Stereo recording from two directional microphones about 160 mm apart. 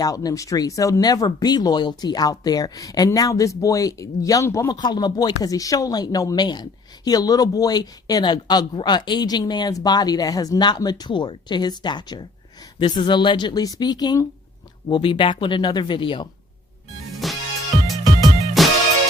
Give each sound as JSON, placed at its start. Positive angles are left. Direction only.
{"t": 0.0, "sound": "speech", "side_deg": 20}
{"t": 17.2, "sound": "music", "side_deg": 0}